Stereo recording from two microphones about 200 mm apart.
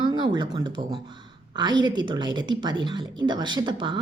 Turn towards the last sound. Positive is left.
turn(degrees=-25)  # may be behind; listen again after turning